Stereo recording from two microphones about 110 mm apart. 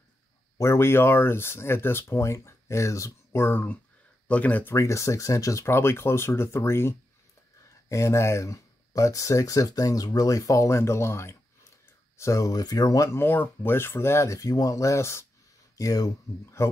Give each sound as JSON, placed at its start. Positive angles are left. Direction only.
{"t": 0.6, "sound": "speech", "side_deg": 25}
{"t": 4.7, "sound": "speech", "side_deg": 25}